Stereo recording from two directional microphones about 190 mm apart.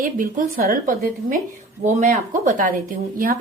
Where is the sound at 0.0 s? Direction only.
45° right (ahead or behind).